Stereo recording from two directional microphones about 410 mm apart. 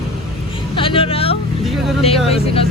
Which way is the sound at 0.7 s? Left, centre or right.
Centre.